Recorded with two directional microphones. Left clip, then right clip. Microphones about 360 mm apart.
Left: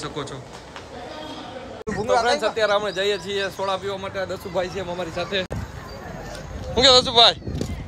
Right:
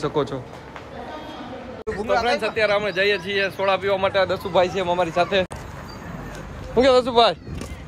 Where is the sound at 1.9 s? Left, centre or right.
Left.